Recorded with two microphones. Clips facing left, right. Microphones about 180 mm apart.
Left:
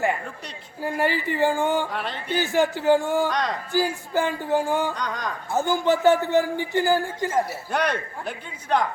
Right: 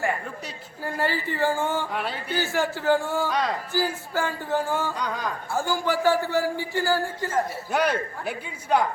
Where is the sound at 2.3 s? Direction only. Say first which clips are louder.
Left 4 dB; 20° left (ahead or behind).